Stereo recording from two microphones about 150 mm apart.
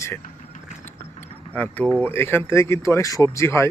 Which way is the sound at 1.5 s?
10° left (ahead or behind).